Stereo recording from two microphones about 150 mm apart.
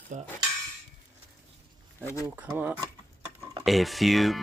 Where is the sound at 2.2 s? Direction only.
10° right (ahead or behind).